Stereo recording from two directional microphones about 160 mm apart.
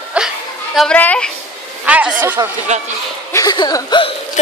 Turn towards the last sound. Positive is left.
turn(degrees=30)  # may be behind; listen again after turning